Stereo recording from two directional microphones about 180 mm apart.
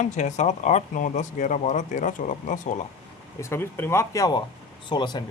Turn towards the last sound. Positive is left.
turn(degrees=25)  # may be behind; listen again after turning